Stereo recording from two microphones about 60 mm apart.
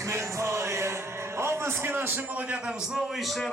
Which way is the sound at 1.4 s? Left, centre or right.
Right.